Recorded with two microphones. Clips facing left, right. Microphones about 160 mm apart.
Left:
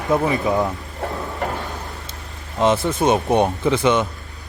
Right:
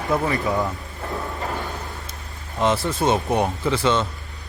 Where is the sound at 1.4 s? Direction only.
70° left (ahead or behind).